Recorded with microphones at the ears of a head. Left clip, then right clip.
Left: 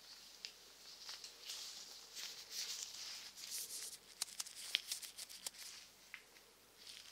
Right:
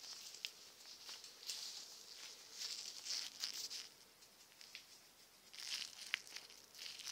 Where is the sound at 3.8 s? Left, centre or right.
Left.